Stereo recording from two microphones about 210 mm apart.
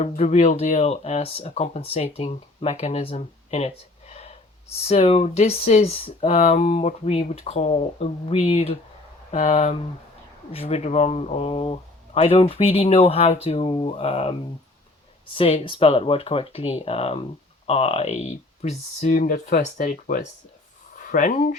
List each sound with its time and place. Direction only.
0.0 s speech: 35° left (ahead or behind)
4.1 s gasp: 30° left (ahead or behind)
4.9 s speech: 30° left (ahead or behind)
15.4 s speech: 25° left (ahead or behind)